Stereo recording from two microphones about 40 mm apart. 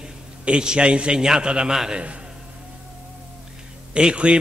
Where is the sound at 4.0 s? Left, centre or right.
Right.